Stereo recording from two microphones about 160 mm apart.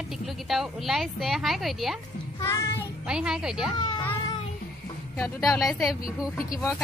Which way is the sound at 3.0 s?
5° right (ahead or behind).